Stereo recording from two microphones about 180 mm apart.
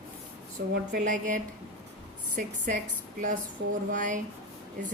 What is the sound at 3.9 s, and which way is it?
Speech, 45° right (ahead or behind).